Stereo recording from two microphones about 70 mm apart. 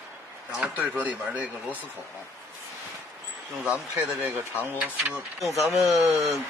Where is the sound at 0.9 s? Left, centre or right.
Right.